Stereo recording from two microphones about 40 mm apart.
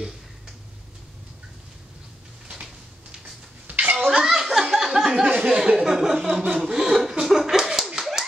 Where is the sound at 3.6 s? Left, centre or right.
Right.